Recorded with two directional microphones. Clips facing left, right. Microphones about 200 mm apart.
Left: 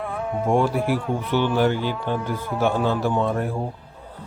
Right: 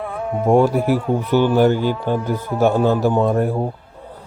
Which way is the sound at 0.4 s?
40° right (ahead or behind).